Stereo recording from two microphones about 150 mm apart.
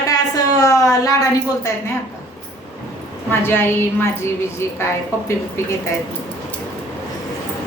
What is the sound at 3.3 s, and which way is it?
Speech, 15° left (ahead or behind).